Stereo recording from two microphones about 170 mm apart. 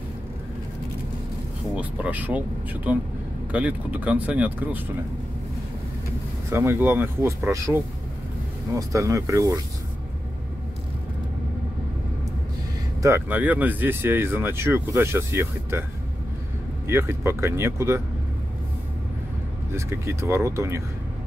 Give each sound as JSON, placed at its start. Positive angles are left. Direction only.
{"t": 1.8, "sound": "speech", "side_deg": -10}
{"t": 6.5, "sound": "speech", "side_deg": -15}
{"t": 8.7, "sound": "speech", "side_deg": -20}
{"t": 13.0, "sound": "speech", "side_deg": -15}
{"t": 16.8, "sound": "speech", "side_deg": -15}
{"t": 19.7, "sound": "speech", "side_deg": -15}